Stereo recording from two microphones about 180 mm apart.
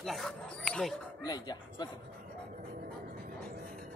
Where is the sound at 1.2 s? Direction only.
25° left (ahead or behind).